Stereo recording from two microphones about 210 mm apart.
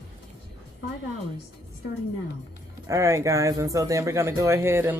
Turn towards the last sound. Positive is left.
turn(degrees=-10)  # may be behind; listen again after turning